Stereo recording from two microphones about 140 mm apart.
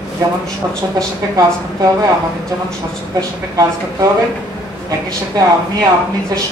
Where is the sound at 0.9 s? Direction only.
25° right (ahead or behind).